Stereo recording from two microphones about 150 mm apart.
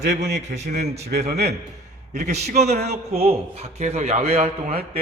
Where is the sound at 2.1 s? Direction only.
50° right (ahead or behind).